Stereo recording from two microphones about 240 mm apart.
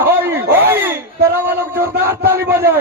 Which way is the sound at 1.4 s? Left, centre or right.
Centre.